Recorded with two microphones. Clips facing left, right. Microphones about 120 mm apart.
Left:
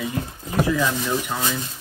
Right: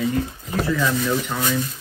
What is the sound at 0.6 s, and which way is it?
Speech, 15° left (ahead or behind).